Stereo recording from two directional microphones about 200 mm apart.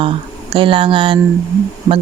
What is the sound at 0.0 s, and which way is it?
Speech, 25° right (ahead or behind).